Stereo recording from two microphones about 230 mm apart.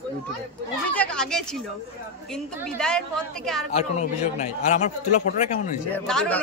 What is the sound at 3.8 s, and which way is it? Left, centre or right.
A man's voice, left.